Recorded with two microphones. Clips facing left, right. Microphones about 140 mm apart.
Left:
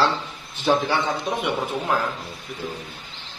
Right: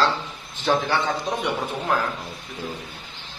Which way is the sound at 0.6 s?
10° left (ahead or behind).